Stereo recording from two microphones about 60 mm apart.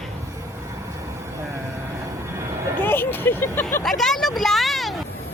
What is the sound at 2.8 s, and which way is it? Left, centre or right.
Vehicle, left.